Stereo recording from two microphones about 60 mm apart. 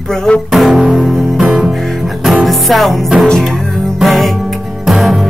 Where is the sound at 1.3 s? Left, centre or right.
Centre.